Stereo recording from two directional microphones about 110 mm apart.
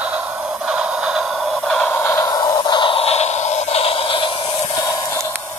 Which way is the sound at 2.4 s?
40° left (ahead or behind).